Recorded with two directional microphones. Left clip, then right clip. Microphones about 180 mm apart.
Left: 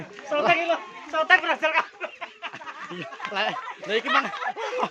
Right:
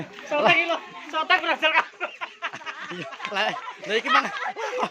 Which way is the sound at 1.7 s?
50° right (ahead or behind).